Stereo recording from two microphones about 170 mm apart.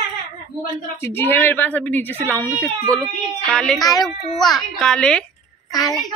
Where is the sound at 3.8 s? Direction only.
20° left (ahead or behind).